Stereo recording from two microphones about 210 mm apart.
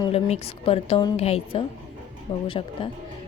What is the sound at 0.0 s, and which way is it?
Speech, 30° left (ahead or behind).